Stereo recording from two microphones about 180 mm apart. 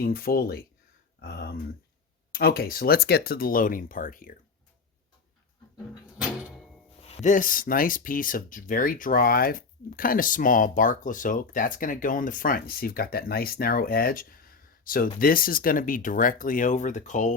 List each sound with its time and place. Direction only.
0.0 s speech: 55° left (ahead or behind)
7.0 s speech: 40° left (ahead or behind)